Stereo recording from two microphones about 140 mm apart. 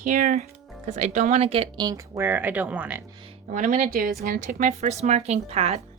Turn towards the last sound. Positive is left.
turn(degrees=-50)  # may be behind; listen again after turning